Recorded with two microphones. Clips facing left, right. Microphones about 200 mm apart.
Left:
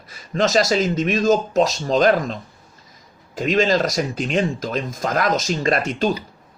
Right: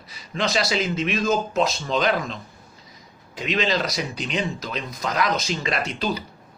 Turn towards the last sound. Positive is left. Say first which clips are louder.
# left 6 dB
turn(degrees=45)  # may be behind; listen again after turning